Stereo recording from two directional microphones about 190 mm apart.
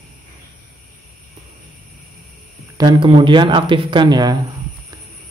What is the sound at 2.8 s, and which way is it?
Speech, 25° right (ahead or behind).